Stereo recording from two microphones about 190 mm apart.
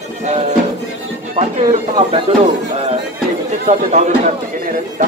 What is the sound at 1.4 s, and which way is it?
Speech, 35° right (ahead or behind).